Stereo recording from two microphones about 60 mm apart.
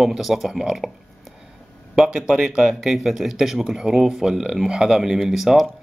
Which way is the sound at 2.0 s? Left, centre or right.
Centre.